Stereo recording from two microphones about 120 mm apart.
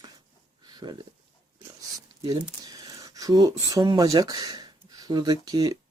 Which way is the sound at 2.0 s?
30° right (ahead or behind).